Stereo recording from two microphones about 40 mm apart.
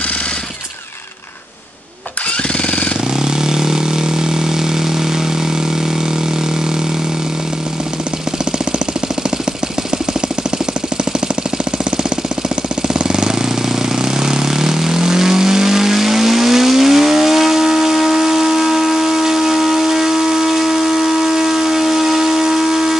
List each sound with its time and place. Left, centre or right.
3.3 s vehicle: centre
13.1 s jackhammer: centre
14.2 s vehicle: centre